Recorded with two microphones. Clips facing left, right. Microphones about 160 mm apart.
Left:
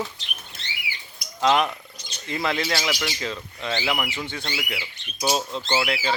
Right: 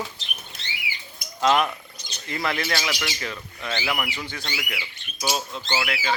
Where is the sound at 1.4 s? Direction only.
20° left (ahead or behind).